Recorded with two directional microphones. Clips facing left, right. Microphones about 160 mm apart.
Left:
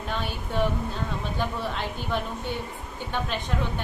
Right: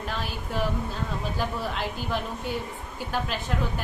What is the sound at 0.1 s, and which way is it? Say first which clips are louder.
Speech: left 3 dB; centre (ahead or behind).